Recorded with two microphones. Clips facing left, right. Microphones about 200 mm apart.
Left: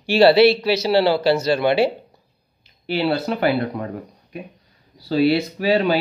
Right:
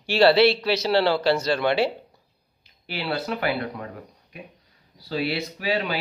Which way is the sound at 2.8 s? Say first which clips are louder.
Left 8 dB; 30° left (ahead or behind).